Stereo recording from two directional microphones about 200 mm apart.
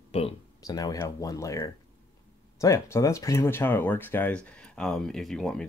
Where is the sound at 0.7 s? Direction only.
20° left (ahead or behind).